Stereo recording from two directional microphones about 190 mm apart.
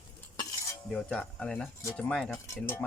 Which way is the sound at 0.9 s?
5° left (ahead or behind).